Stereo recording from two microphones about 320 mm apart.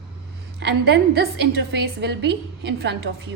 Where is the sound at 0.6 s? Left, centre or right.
Right.